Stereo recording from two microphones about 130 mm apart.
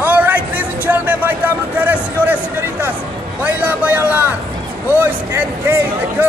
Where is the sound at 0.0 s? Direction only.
10° right (ahead or behind).